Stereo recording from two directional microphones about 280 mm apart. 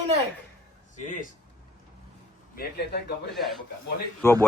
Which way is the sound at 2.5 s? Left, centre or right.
Left.